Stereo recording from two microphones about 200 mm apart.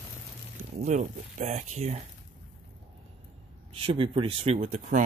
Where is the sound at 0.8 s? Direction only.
35° right (ahead or behind).